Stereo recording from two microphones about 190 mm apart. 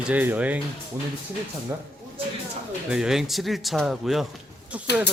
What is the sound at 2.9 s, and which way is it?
Speech, 5° right (ahead or behind).